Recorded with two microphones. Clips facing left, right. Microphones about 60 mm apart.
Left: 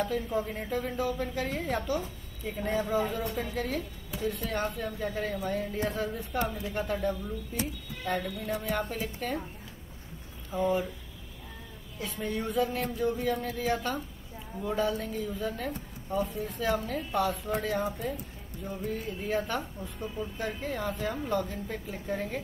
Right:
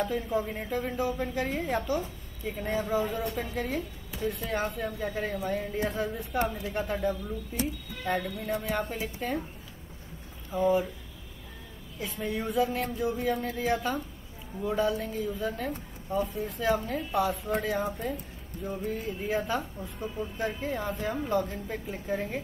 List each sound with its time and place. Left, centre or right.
0.0 s speech: centre
10.5 s speech: centre
12.0 s speech: centre